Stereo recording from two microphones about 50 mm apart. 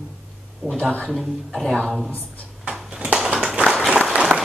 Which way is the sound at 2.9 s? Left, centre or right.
Right.